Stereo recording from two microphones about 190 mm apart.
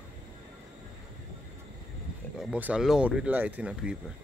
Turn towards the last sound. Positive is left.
turn(degrees=-5)  # may be behind; listen again after turning